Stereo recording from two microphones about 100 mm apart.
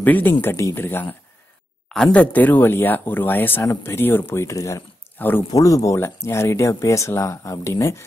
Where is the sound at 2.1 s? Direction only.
15° left (ahead or behind).